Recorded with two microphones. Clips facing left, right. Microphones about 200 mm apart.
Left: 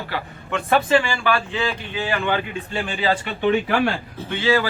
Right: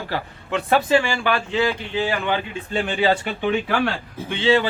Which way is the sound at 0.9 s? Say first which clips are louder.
Even; 15° right (ahead or behind).